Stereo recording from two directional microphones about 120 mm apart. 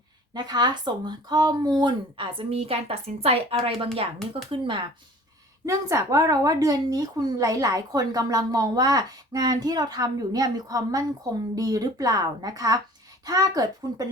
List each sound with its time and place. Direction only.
0.3 s speech: 35° right (ahead or behind)
5.6 s speech: 25° right (ahead or behind)